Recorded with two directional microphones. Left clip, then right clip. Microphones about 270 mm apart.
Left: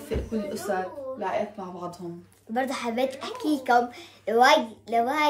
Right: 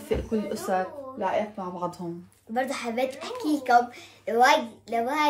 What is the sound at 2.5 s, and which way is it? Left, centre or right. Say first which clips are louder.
A woman's voice: even; centre.